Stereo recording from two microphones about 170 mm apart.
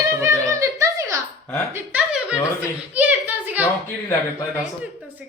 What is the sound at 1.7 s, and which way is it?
Speech, 5° right (ahead or behind).